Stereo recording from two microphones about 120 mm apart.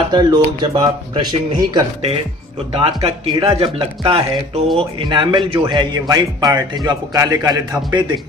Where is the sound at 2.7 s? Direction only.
55° right (ahead or behind).